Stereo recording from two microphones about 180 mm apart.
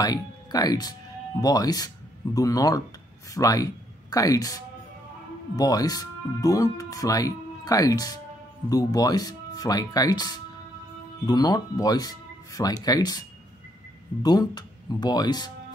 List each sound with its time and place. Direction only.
0.0 s speech: 20° left (ahead or behind)
5.6 s speech: 20° left (ahead or behind)
14.2 s speech: 20° left (ahead or behind)